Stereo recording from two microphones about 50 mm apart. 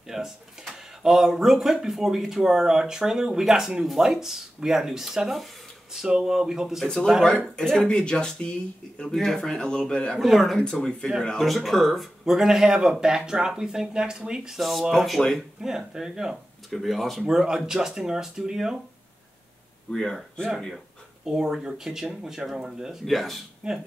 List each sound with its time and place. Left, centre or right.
0.1 s cash register: centre
0.7 s speech: centre
7.2 s speech: centre
9.1 s speech: centre
10.1 s speech: centre
10.6 s speech: centre
11.4 s speech: centre
14.6 s speech: centre
15.6 s speech: centre
16.7 s speech: centre
19.9 s speech: centre
21.3 s speech: centre
23.0 s speech: centre
23.6 s speech: centre